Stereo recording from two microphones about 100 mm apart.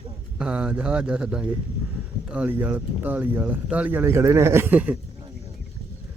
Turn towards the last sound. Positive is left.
turn(degrees=-15)  # may be behind; listen again after turning